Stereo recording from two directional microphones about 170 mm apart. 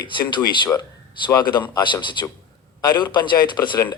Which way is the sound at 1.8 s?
30° left (ahead or behind).